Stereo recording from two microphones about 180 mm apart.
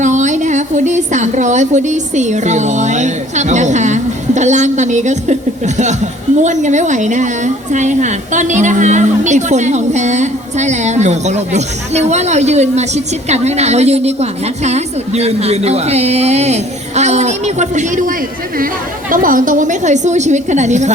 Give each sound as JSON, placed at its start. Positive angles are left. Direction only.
{"t": 0.0, "sound": "a woman's voice", "side_deg": -45}
{"t": 19.1, "sound": "a woman's voice", "side_deg": -50}